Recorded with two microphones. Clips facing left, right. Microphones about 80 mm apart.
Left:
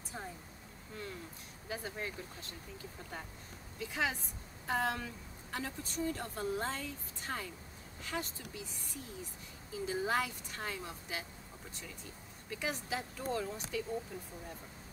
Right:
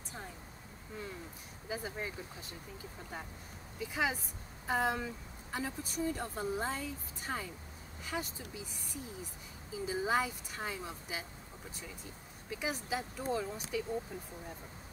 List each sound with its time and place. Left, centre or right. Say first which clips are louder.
1.7 s a woman's voice: right 1 dB; centre
3.8 s a woman's voice: right 1 dB; centre
9.8 s a woman's voice: right 2 dB; centre
12.4 s a woman's voice: right 1 dB; centre
14.1 s a woman's voice: right 1 dB; centre